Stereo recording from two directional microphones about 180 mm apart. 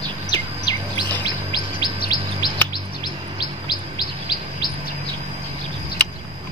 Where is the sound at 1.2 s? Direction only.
25° left (ahead or behind).